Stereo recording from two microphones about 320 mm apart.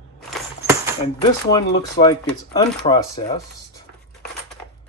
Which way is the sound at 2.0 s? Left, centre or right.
Left.